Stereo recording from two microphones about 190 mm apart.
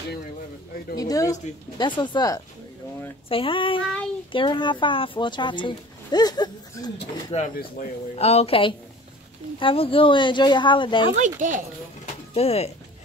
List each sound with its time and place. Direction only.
0.9 s speech: 20° left (ahead or behind)
7.3 s a woman's voice: 40° left (ahead or behind); by 11.1 s 25° left (ahead or behind)
11.1 s speech: 40° right (ahead or behind)
12.4 s a woman's voice: 35° left (ahead or behind)